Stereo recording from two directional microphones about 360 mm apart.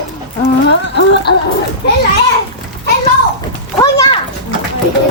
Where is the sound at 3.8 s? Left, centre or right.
Centre.